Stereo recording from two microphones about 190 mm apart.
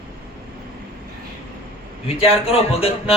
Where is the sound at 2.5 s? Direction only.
30° left (ahead or behind).